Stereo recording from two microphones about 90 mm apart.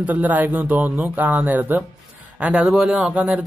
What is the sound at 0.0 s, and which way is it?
A man's voice, 20° right (ahead or behind).